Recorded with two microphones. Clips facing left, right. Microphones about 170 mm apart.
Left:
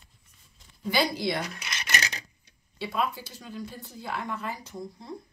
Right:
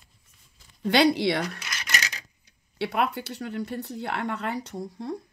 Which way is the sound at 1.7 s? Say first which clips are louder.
Even; 25° left (ahead or behind).